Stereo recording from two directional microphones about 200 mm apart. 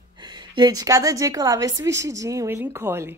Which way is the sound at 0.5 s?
20° right (ahead or behind).